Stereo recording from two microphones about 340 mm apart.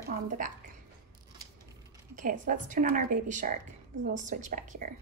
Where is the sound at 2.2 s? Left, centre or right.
Right.